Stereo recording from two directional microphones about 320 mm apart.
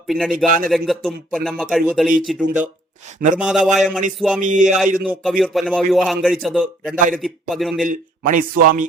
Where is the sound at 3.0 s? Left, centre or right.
Right.